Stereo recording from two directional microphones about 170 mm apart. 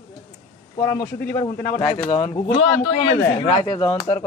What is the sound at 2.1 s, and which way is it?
Speech, 35° left (ahead or behind).